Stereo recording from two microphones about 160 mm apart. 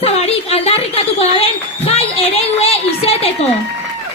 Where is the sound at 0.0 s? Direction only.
40° left (ahead or behind).